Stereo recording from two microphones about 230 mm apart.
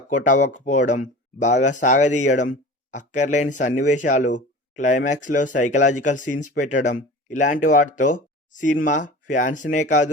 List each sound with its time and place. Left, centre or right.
0.3 s speech: left